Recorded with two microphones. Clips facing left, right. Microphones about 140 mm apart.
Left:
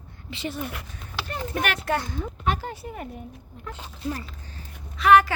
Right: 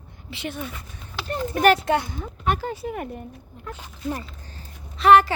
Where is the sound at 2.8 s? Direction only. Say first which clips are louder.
Right 6 dB; 65° right (ahead or behind).